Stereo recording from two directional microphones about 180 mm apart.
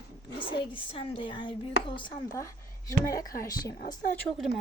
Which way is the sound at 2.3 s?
15° left (ahead or behind).